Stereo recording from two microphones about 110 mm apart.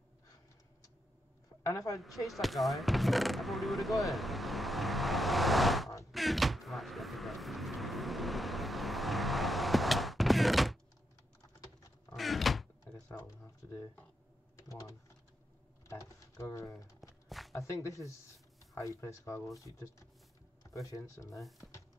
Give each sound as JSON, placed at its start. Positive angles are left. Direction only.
{"t": 1.6, "sound": "a woman's voice", "side_deg": 30}
{"t": 2.0, "sound": "speech", "side_deg": 0}
{"t": 6.1, "sound": "vehicle", "side_deg": 0}
{"t": 12.1, "sound": "door", "side_deg": 0}
{"t": 14.7, "sound": "speech", "side_deg": 30}
{"t": 17.3, "sound": "a sound", "side_deg": 0}
{"t": 17.6, "sound": "speech", "side_deg": 30}